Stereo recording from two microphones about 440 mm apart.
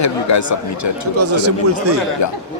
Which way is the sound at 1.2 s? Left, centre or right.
Right.